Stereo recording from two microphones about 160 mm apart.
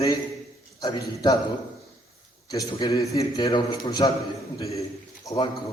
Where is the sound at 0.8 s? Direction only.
25° left (ahead or behind).